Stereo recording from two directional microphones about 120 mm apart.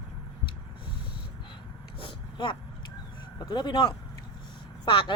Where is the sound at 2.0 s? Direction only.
45° left (ahead or behind).